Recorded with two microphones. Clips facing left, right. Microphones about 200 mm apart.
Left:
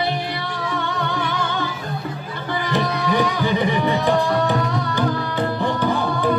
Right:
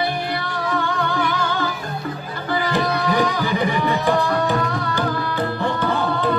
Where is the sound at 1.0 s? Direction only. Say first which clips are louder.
Right 2 dB; 20° left (ahead or behind).